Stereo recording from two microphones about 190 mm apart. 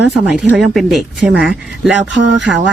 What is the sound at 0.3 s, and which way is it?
Speech, 5° right (ahead or behind).